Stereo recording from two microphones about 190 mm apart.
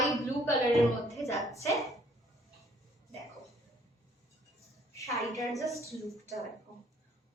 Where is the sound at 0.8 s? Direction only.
Centre (ahead or behind).